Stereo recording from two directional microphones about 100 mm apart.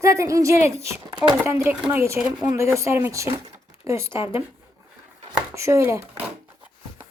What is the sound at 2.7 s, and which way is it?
Speech, 25° right (ahead or behind).